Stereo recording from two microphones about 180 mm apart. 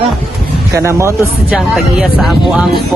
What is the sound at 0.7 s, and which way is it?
Speech, 15° right (ahead or behind).